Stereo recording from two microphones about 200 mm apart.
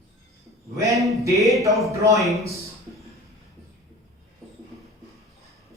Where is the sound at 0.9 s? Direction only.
Centre (ahead or behind).